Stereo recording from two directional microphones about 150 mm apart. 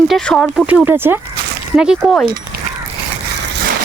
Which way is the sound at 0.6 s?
10° right (ahead or behind).